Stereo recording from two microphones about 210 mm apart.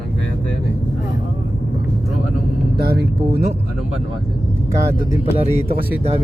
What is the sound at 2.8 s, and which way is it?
Speech, 50° right (ahead or behind).